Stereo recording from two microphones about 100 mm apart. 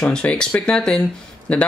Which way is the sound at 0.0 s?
10° left (ahead or behind).